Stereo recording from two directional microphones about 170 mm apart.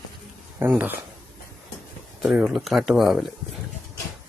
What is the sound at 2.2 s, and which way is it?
Speech, centre (ahead or behind).